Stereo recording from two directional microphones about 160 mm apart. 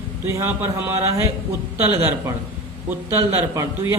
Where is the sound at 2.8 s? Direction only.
15° right (ahead or behind).